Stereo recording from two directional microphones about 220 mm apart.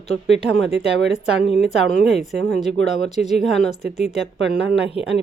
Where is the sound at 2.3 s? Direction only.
Centre (ahead or behind).